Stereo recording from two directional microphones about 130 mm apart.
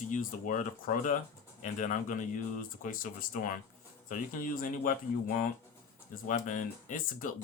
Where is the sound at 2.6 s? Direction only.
90° left.